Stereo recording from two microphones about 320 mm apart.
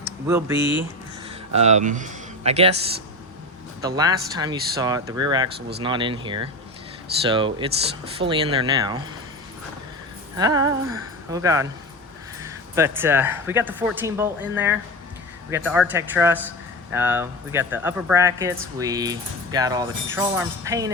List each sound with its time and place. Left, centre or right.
0.0 s a sound: centre
1.5 s speech: right
3.8 s speech: centre
10.3 s a man's voice: centre